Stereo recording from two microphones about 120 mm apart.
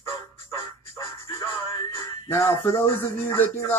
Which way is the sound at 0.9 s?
25° left (ahead or behind).